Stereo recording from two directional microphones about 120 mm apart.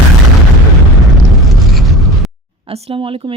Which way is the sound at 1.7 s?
Centre (ahead or behind).